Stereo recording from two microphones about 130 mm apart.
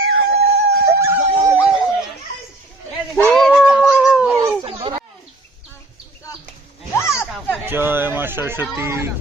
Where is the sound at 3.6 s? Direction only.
10° right (ahead or behind).